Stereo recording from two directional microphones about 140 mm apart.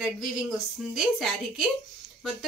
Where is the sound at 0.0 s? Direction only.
5° right (ahead or behind).